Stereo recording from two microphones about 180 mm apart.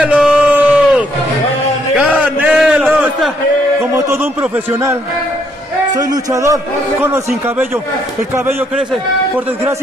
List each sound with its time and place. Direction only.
0.0 s a sound: 5° right (ahead or behind)
4.1 s a man's voice: 10° right (ahead or behind)
5.9 s a man's voice: 20° right (ahead or behind)
8.5 s a man's voice: 10° right (ahead or behind)